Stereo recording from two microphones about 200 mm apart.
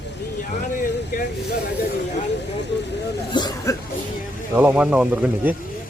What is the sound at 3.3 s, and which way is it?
Cough, 20° left (ahead or behind).